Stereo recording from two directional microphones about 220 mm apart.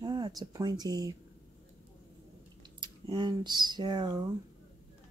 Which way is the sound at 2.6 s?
20° right (ahead or behind).